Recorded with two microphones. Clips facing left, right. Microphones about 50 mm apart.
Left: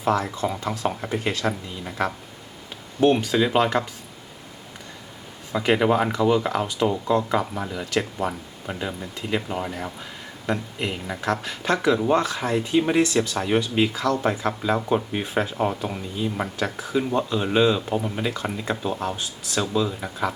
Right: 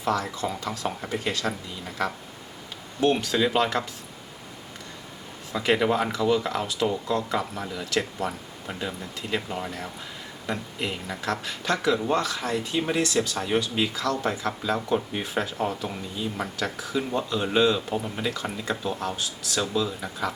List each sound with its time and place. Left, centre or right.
0.0 s speech: left
5.5 s speech: centre